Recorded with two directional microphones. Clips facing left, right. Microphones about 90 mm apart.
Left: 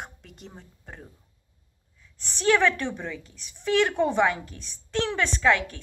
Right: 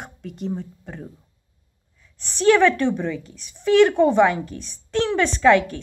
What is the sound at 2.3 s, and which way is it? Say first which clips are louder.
A woman's voice: right 6 dB; centre (ahead or behind).